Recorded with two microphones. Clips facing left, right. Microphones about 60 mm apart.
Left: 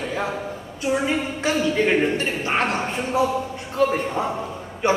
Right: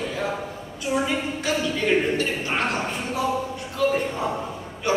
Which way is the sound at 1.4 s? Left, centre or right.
Left.